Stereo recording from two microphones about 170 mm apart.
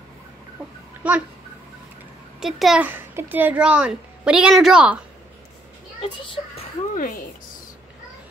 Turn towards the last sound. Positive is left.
turn(degrees=55)  # may be behind; listen again after turning